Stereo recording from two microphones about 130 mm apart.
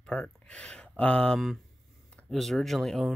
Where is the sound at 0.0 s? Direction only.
10° left (ahead or behind).